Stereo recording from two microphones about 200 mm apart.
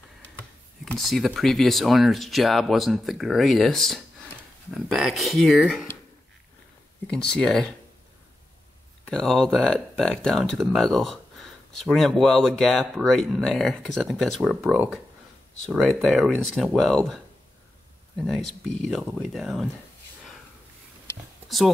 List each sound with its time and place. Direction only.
0.8 s speech: centre (ahead or behind)
7.3 s speech: centre (ahead or behind)
9.1 s speech: centre (ahead or behind)